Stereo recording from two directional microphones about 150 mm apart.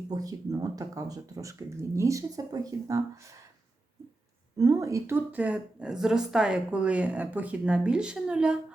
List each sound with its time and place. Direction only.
0.1 s speech: 25° right (ahead or behind)
4.5 s speech: 20° right (ahead or behind); by 8.5 s 5° right (ahead or behind)